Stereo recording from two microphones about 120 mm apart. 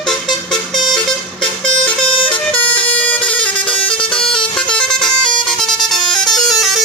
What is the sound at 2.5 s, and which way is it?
Vehicle, 10° left (ahead or behind).